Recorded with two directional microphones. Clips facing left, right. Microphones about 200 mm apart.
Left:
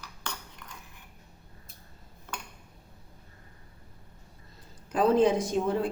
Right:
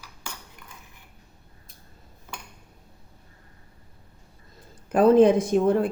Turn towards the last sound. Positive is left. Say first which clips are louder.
# right 6 dB
turn(degrees=-55)  # may be behind; listen again after turning